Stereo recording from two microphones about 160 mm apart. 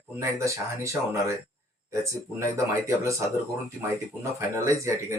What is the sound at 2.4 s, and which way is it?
Speech, 20° right (ahead or behind).